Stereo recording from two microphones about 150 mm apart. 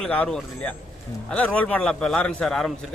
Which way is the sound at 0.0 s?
5° left (ahead or behind).